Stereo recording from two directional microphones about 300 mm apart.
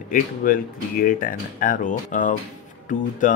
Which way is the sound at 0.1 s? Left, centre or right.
Left.